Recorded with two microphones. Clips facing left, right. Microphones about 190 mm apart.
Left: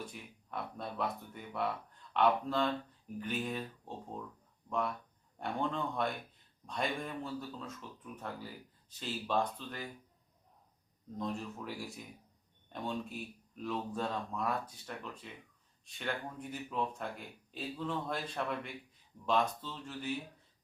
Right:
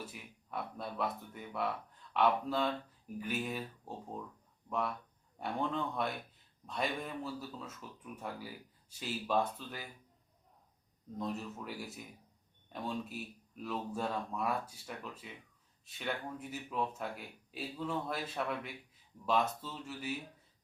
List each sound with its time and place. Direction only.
0.0 s speech: 5° right (ahead or behind)
5.4 s speech: 5° right (ahead or behind)
11.2 s speech: 5° right (ahead or behind)